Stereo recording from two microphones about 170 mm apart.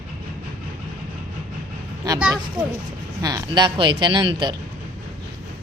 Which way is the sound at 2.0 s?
20° right (ahead or behind).